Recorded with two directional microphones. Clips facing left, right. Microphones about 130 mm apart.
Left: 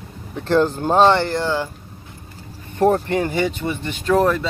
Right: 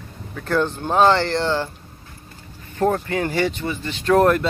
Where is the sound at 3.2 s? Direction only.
15° left (ahead or behind).